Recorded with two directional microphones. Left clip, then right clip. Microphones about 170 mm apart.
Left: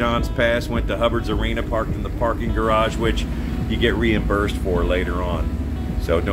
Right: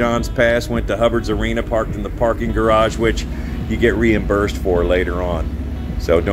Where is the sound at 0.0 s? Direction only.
30° right (ahead or behind).